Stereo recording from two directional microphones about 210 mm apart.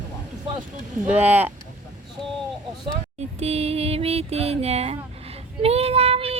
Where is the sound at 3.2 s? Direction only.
30° right (ahead or behind).